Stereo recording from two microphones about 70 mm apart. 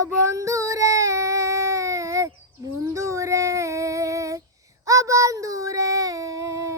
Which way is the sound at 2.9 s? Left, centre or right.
Right.